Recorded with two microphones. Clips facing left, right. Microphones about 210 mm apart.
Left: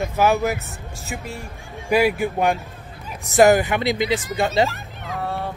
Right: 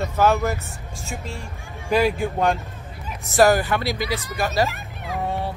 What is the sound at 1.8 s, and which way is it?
Speech, 10° left (ahead or behind).